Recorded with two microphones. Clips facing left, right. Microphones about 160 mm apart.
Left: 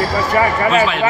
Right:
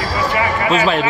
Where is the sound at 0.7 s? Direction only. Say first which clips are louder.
Even; 40° right (ahead or behind).